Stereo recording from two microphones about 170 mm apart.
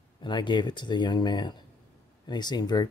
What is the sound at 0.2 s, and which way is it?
Speech, 25° left (ahead or behind).